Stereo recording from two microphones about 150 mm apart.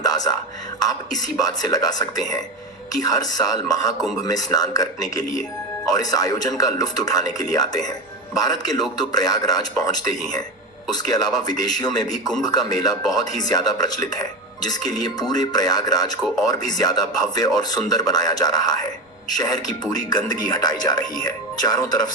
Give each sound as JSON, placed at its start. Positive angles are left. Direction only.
{"t": 0.0, "sound": "a sound", "side_deg": 25}
{"t": 0.8, "sound": "speech", "side_deg": 25}
{"t": 21.2, "sound": "speech", "side_deg": 25}